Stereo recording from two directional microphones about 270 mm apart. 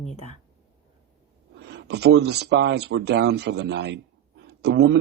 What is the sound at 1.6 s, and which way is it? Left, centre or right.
Speech, right.